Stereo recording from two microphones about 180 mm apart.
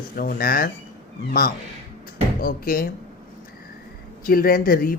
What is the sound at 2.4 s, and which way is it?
Speech, 55° left (ahead or behind).